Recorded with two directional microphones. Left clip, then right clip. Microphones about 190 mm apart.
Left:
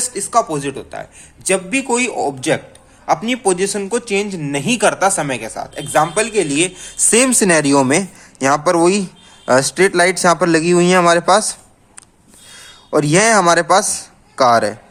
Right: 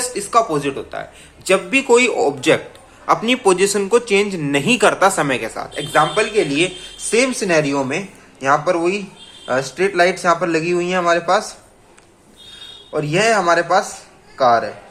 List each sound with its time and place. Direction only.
0.0 s speech: 35° left (ahead or behind)
5.9 s speech: 40° left (ahead or behind)
12.9 s speech: 50° left (ahead or behind)